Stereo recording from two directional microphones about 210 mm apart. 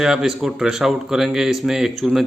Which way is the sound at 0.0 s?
Centre (ahead or behind).